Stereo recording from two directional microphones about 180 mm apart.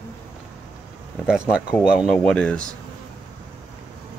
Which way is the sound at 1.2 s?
5° right (ahead or behind).